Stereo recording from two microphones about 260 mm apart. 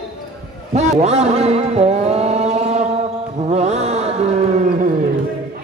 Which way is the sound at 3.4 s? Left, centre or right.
Right.